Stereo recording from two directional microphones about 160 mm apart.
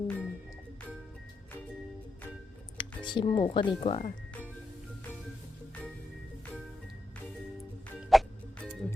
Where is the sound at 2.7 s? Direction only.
30° left (ahead or behind).